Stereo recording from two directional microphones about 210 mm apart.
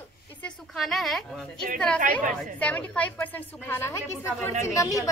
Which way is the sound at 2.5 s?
5° left (ahead or behind).